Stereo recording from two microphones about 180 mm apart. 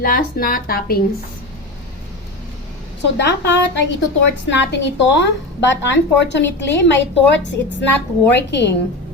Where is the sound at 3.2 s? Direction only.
75° left (ahead or behind).